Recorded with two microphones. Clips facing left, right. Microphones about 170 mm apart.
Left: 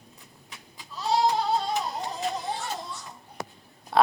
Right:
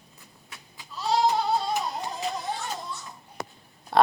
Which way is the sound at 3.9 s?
Centre (ahead or behind).